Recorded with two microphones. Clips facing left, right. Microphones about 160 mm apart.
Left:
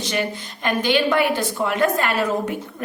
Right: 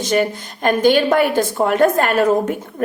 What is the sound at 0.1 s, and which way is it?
A woman's voice, 45° right (ahead or behind).